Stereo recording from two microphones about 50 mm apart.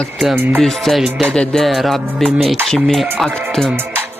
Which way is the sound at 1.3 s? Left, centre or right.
Centre.